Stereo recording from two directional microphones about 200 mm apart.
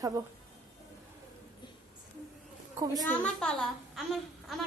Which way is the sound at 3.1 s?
5° left (ahead or behind).